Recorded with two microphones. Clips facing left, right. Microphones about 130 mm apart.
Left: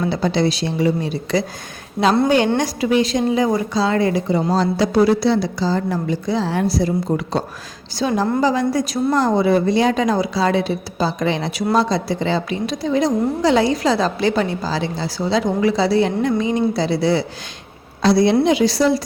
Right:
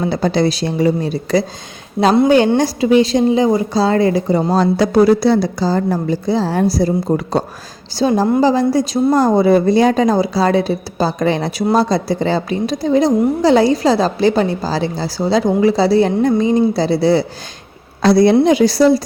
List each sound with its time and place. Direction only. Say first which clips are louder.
0.1 s a woman's voice: right 3 dB; 45° right (ahead or behind)
2.0 s a woman's voice: right 3 dB; 10° right (ahead or behind)
2.6 s a woman's voice: right 5 dB; 30° right (ahead or behind)
4.5 s a woman's voice: right 4 dB; 55° right (ahead or behind); by 9.0 s 30° right (ahead or behind)
9.1 s a woman's voice: right 4 dB; 40° right (ahead or behind)
18.0 s a woman's voice: right 4 dB; 50° right (ahead or behind)